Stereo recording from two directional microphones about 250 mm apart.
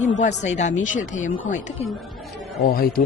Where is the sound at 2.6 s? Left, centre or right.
Left.